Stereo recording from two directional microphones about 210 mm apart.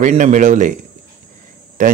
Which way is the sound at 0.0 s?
35° right (ahead or behind).